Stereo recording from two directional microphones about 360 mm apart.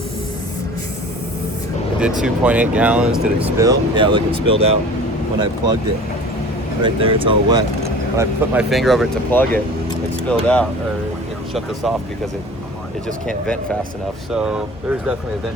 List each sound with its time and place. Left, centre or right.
2.0 s speech: centre
6.8 s speech: centre
13.1 s speech: centre